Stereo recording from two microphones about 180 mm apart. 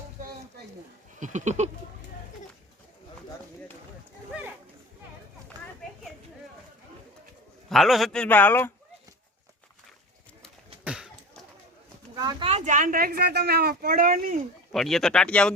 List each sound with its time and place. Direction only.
1.2 s a sound: 40° right (ahead or behind)
7.7 s a man's voice: centre (ahead or behind)
10.8 s a sound: 5° right (ahead or behind)
12.1 s speech: 20° right (ahead or behind)
12.5 s speech: 40° right (ahead or behind)
14.7 s a man's voice: centre (ahead or behind)